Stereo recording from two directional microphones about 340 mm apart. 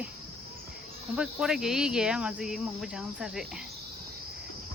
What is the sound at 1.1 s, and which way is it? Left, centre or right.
Speech, centre.